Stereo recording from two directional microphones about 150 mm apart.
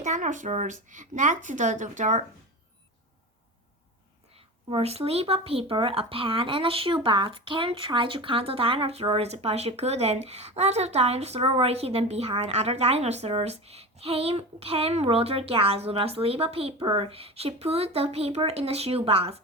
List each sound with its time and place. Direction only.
0.0 s speech: 55° right (ahead or behind)
4.7 s speech: 40° right (ahead or behind)